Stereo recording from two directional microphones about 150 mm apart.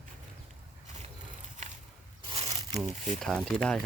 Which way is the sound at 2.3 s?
40° right (ahead or behind).